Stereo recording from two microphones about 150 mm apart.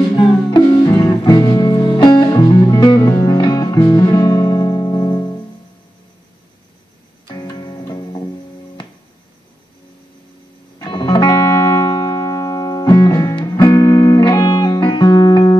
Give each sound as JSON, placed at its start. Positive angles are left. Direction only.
{"t": 0.1, "sound": "music", "side_deg": 30}
{"t": 7.2, "sound": "music", "side_deg": 25}
{"t": 10.8, "sound": "music", "side_deg": 30}